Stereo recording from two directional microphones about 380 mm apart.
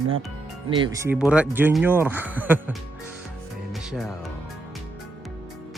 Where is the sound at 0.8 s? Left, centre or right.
Centre.